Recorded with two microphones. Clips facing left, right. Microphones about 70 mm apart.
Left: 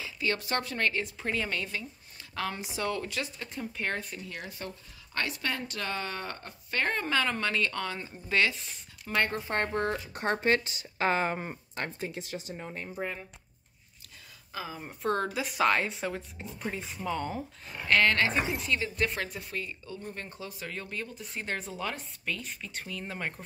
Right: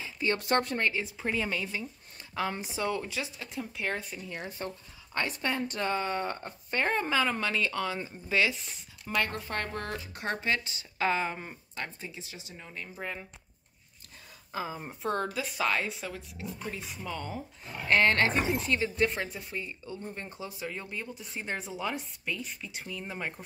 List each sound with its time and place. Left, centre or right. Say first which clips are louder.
0.4 s a woman's voice: right 5 dB; right
0.7 s speech: even; centre
2.5 s speech: right 1 dB; right; by 4.2 s centre
4.5 s speech: right 3 dB; right
5.1 s speech: right 1 dB; centre
7.1 s speech: even; centre
9.0 s speech: left 2 dB; centre
9.5 s speech: left 5 dB; left
12.0 s speech: left 7 dB; left
14.5 s a woman's voice: right 3 dB; right
15.0 s a woman's voice: left 2 dB; centre
17.0 s speech: left 5 dB; centre
17.8 s speech: even; right; by 23.4 s centre